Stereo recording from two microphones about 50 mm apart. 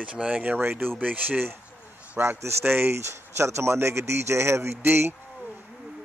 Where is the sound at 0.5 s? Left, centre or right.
Right.